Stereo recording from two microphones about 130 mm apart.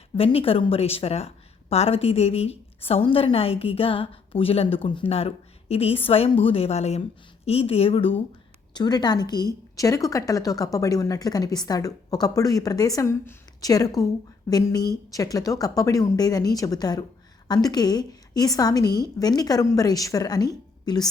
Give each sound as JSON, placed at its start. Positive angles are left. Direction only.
{"t": 0.2, "sound": "a woman's voice", "side_deg": 45}
{"t": 8.7, "sound": "a woman's voice", "side_deg": 30}